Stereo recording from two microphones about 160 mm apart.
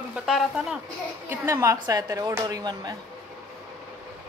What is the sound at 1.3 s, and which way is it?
Speech, 15° right (ahead or behind).